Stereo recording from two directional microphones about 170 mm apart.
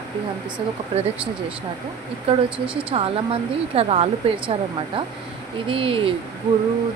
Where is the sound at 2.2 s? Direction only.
30° right (ahead or behind).